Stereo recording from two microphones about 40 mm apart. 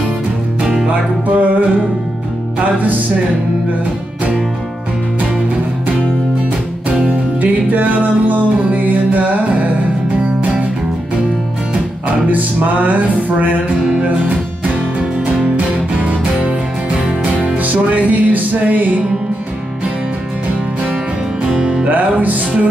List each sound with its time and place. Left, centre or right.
0.8 s music: right
7.4 s music: right
12.1 s music: right
16.3 s music: right
17.6 s music: right
21.5 s music: centre
21.8 s music: right